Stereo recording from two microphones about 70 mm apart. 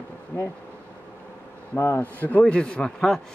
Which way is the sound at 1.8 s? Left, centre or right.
Left.